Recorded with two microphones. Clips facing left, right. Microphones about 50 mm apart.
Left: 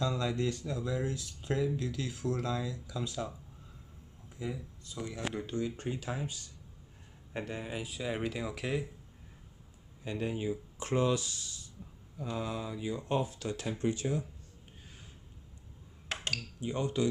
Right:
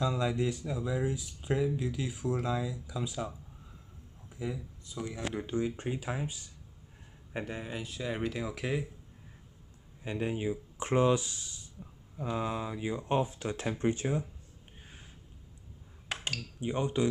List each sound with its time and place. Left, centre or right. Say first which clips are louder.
0.0 s speech: right 2 dB; centre
4.4 s speech: right 2 dB; centre
7.3 s speech: right 1 dB; centre
7.7 s speech: left 1 dB; centre
10.0 s speech: right 2 dB; right
16.6 s speech: right 2 dB; right